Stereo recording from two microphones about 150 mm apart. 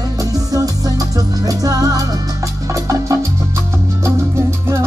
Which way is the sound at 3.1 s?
20° right (ahead or behind).